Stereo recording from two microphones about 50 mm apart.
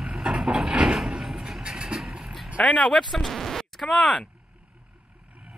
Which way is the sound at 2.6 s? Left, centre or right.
Centre.